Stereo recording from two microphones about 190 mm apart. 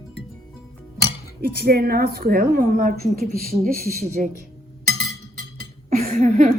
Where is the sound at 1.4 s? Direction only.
55° right (ahead or behind).